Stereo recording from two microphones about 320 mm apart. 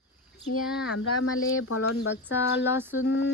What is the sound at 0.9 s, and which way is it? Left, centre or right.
Speech, left.